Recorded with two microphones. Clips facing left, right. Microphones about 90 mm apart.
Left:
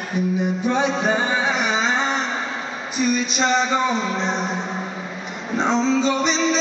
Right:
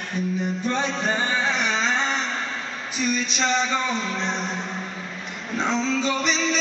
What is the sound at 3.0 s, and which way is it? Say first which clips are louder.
Speech: left 4 dB; 5° left (ahead or behind).